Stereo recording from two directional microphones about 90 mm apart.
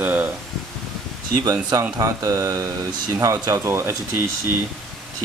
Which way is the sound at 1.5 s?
45° right (ahead or behind).